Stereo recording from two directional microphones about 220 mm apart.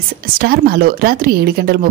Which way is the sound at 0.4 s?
45° right (ahead or behind).